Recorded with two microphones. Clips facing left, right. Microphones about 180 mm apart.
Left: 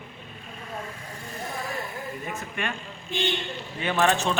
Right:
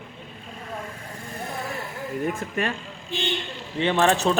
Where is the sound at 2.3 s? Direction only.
40° right (ahead or behind).